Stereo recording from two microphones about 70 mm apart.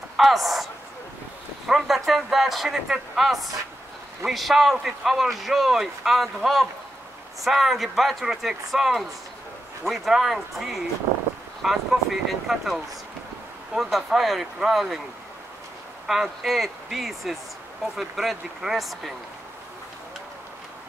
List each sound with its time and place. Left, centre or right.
0.2 s a man's voice: centre
1.7 s a man's voice: centre
16.1 s a man's voice: centre